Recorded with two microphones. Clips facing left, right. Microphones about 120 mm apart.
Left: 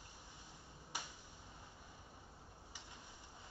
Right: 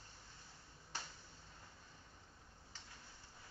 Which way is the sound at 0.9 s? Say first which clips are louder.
Left 1 dB; 15° left (ahead or behind).